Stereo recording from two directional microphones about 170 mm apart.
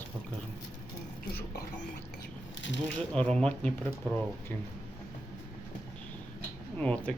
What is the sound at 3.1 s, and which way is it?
Speech, 5° left (ahead or behind).